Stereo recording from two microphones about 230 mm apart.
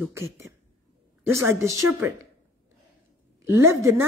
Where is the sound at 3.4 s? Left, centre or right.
Centre.